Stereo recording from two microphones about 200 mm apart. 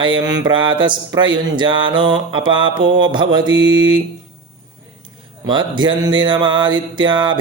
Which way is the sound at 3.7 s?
70° right (ahead or behind).